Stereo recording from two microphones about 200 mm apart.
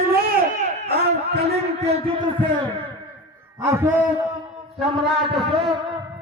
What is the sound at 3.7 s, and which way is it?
Speech, 15° right (ahead or behind).